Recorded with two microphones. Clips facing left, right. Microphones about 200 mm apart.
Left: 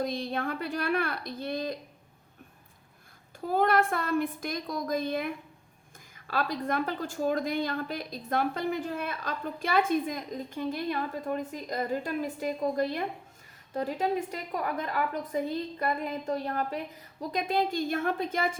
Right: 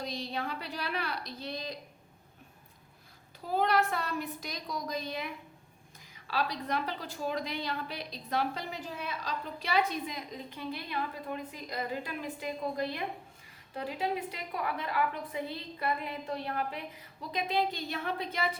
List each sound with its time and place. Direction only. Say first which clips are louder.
0.0 s a woman's voice: left 6 dB; 50° left (ahead or behind)
3.4 s a woman's voice: left 3 dB; 50° left (ahead or behind)